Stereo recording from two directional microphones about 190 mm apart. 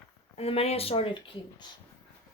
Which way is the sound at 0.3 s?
30° left (ahead or behind).